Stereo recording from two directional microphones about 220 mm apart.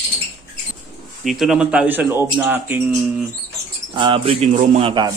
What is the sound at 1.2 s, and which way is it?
Speech, centre (ahead or behind).